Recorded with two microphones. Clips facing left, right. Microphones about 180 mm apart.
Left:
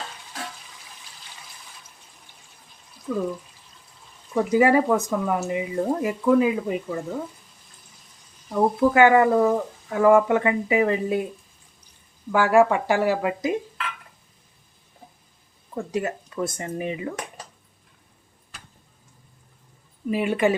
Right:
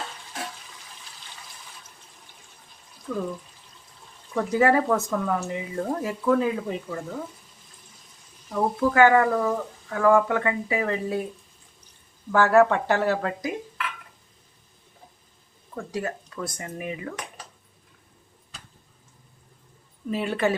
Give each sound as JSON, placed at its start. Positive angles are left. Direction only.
{"t": 3.1, "sound": "speech", "side_deg": 5}
{"t": 4.4, "sound": "speech", "side_deg": 15}
{"t": 8.5, "sound": "speech", "side_deg": 20}
{"t": 12.3, "sound": "speech", "side_deg": 10}
{"t": 15.7, "sound": "speech", "side_deg": 20}
{"t": 20.1, "sound": "speech", "side_deg": 15}